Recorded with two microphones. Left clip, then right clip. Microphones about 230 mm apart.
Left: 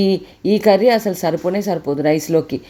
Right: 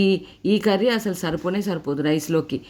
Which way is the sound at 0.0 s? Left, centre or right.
Centre.